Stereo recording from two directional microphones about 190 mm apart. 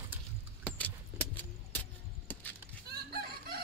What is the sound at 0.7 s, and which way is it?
Vehicle, 10° left (ahead or behind).